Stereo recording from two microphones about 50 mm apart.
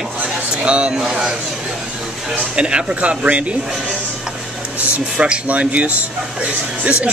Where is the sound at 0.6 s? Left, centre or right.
Right.